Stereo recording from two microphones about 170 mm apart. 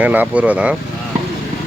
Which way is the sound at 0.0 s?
10° right (ahead or behind).